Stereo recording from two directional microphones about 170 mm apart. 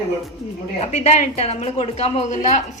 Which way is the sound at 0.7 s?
40° left (ahead or behind).